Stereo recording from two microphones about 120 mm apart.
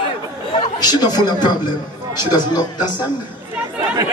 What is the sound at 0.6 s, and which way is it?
A man's voice, 35° left (ahead or behind).